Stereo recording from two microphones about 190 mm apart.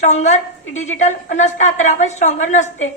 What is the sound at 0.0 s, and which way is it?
A woman's voice, 40° left (ahead or behind).